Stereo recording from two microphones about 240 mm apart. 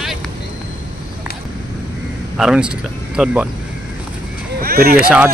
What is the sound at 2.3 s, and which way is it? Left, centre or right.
Speech, centre.